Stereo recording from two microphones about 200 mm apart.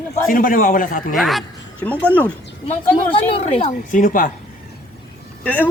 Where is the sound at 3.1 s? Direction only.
30° left (ahead or behind).